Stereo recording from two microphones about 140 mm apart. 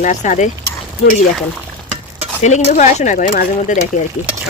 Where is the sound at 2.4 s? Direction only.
55° left (ahead or behind).